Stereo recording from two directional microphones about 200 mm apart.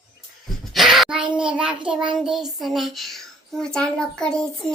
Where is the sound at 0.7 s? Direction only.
Centre (ahead or behind).